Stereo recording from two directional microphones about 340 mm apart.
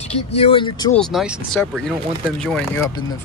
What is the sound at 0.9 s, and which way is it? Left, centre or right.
Speech, centre.